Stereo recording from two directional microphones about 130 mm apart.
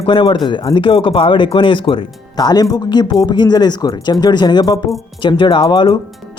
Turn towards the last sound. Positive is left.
turn(degrees=35)  # may be behind; listen again after turning